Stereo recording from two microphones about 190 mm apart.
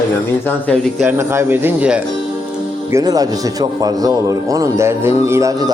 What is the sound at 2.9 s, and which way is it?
Speech, 15° right (ahead or behind).